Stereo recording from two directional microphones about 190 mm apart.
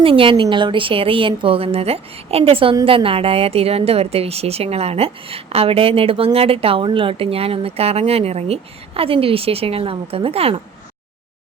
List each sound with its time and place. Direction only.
0.0 s a woman's voice: 30° right (ahead or behind)